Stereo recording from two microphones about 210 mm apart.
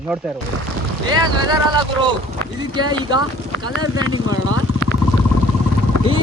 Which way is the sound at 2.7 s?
20° right (ahead or behind).